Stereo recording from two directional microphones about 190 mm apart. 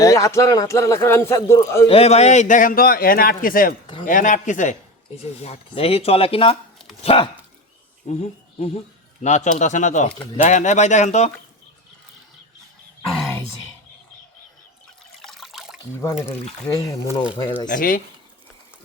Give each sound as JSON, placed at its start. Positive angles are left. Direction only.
{"t": 0.0, "sound": "a man's voice", "side_deg": 15}
{"t": 1.9, "sound": "a man's voice", "side_deg": 30}
{"t": 15.2, "sound": "water", "side_deg": 0}
{"t": 16.2, "sound": "a man's voice", "side_deg": 15}
{"t": 17.7, "sound": "a man's voice", "side_deg": 45}